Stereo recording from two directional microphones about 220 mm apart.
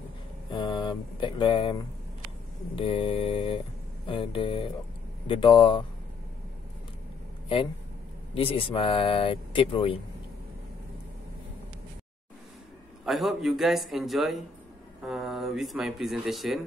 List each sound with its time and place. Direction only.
0.5 s mantra: 20° left (ahead or behind)
2.7 s speech: 25° left (ahead or behind)
8.4 s speech: 25° left (ahead or behind)
13.0 s speech: centre (ahead or behind)